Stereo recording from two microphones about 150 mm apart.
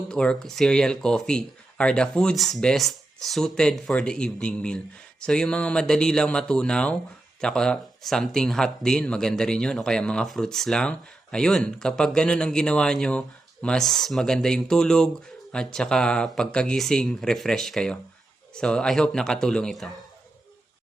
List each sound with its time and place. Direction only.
0.1 s speech: 5° left (ahead or behind)